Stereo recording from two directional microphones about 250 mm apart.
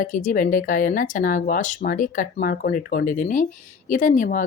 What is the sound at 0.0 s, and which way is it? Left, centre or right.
Speech, left.